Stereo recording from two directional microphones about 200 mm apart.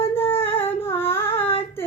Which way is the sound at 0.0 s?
10° left (ahead or behind).